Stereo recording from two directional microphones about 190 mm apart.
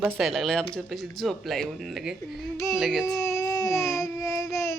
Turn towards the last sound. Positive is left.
turn(degrees=15)  # may be behind; listen again after turning